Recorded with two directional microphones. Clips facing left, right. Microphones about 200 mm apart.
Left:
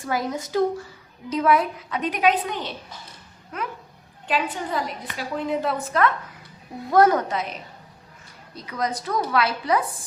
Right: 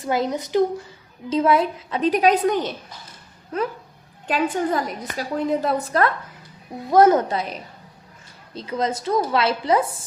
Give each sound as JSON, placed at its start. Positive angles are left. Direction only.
{"t": 0.0, "sound": "a woman's voice", "side_deg": -20}
{"t": 3.5, "sound": "a woman's voice", "side_deg": -30}
{"t": 4.3, "sound": "a woman's voice", "side_deg": -45}
{"t": 6.9, "sound": "a woman's voice", "side_deg": -20}